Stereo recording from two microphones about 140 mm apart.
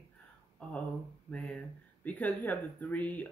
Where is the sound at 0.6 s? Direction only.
10° left (ahead or behind).